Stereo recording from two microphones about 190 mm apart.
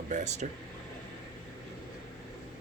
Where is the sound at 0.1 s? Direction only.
35° right (ahead or behind).